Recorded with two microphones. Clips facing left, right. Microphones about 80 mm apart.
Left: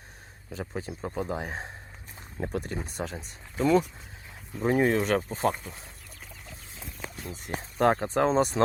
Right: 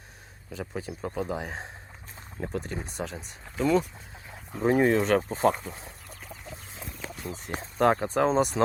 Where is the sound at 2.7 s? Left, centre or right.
Centre.